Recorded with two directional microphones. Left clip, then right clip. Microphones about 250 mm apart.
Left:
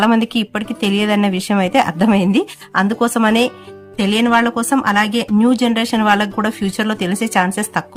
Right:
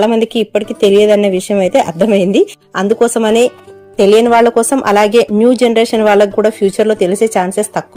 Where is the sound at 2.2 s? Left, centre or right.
Left.